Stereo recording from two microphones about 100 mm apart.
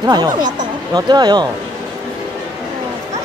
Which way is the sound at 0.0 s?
45° right (ahead or behind).